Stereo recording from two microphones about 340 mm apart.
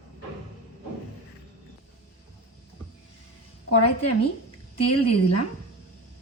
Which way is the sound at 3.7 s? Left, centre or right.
Left.